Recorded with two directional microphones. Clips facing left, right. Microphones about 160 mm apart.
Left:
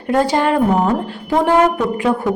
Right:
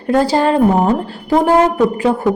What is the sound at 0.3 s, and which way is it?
A woman's voice, 35° right (ahead or behind).